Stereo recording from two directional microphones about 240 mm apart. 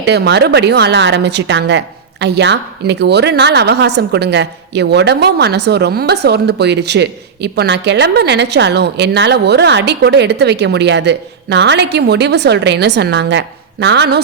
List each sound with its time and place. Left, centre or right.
0.0 s a woman's voice: right